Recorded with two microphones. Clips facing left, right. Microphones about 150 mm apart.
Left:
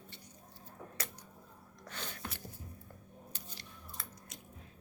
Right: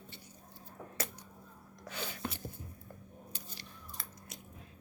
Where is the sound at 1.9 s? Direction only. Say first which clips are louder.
Right 4 dB; 5° right (ahead or behind).